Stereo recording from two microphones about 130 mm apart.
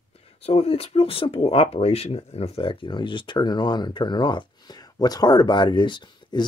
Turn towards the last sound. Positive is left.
turn(degrees=35)  # may be behind; listen again after turning